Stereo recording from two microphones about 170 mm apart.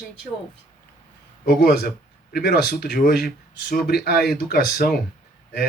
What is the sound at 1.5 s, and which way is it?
Speech, 70° left (ahead or behind).